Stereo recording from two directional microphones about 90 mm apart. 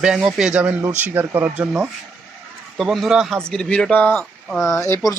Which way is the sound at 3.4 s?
10° left (ahead or behind).